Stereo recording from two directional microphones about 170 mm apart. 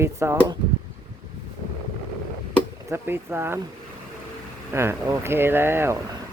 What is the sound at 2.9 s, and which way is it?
Speech, 15° right (ahead or behind).